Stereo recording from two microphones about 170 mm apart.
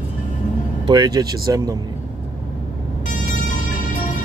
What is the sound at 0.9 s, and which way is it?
Speech, 25° right (ahead or behind).